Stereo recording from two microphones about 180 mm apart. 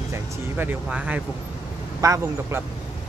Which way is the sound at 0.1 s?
10° right (ahead or behind).